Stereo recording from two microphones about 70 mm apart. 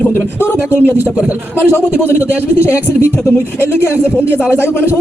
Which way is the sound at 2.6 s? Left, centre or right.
Left.